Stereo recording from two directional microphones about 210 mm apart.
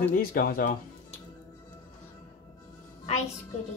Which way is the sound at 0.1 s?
45° left (ahead or behind).